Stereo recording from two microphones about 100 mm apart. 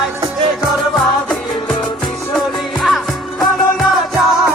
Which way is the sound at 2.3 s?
Centre (ahead or behind).